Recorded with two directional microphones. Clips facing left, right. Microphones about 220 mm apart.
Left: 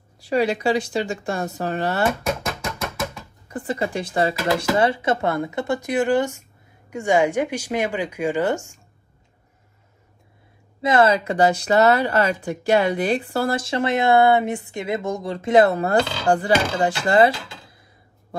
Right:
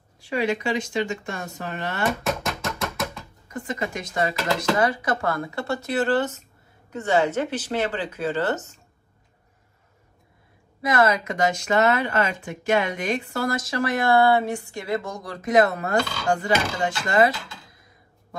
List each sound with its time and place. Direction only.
0.2 s speech: 35° left (ahead or behind)
2.4 s music: centre (ahead or behind)
3.4 s speech: 35° left (ahead or behind); by 8.8 s 10° left (ahead or behind)
10.8 s speech: 30° left (ahead or behind)